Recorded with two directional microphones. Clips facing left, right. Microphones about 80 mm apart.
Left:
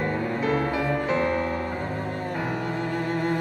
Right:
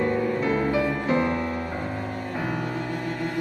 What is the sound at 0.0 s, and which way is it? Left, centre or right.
Music, left.